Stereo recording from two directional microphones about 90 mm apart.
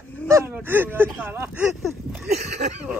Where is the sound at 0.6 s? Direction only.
25° right (ahead or behind).